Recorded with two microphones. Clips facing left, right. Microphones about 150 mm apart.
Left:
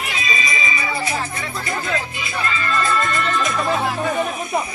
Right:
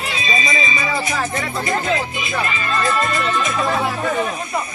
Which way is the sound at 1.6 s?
20° right (ahead or behind).